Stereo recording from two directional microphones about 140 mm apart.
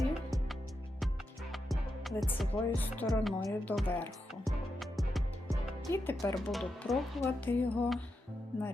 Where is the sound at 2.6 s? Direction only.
15° left (ahead or behind).